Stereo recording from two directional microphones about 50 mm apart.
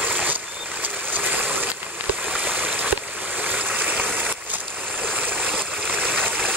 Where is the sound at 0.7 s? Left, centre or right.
Right.